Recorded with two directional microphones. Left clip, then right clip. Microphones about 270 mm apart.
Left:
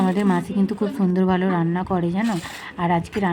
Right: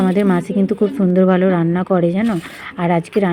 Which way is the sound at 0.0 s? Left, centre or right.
Centre.